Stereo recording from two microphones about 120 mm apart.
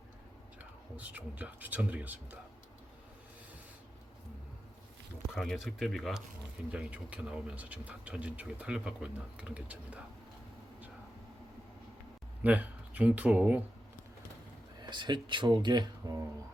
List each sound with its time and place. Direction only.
0.6 s speech: 15° right (ahead or behind)
5.3 s speech: centre (ahead or behind)
6.7 s speech: 10° right (ahead or behind)
12.4 s speech: 15° right (ahead or behind)
14.8 s speech: 40° right (ahead or behind)